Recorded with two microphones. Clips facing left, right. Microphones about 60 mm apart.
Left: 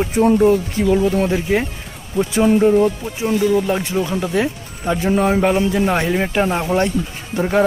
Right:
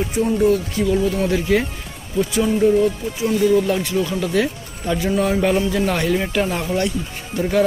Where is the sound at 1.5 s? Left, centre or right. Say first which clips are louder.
Even; left.